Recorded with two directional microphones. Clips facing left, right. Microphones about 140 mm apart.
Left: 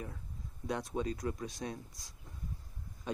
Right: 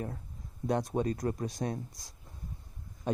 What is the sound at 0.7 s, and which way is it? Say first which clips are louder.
Speech: right 6 dB; 45° right (ahead or behind).